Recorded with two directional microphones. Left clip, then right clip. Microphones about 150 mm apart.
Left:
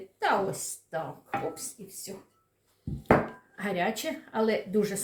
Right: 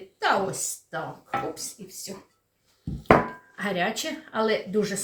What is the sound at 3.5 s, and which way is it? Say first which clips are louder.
Speech: right 3 dB; 5° left (ahead or behind).